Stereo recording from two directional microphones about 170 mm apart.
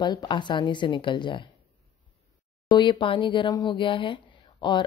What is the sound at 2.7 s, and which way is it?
A woman's voice, 25° left (ahead or behind).